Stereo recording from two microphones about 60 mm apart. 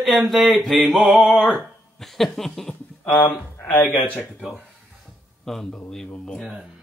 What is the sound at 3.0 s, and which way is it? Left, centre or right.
Speech, left.